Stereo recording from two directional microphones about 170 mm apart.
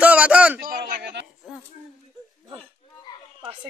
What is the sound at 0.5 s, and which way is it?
Speech, 55° right (ahead or behind).